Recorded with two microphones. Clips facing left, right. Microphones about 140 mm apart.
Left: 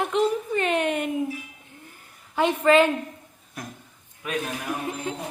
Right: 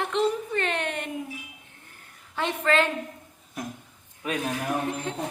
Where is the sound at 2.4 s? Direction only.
10° left (ahead or behind).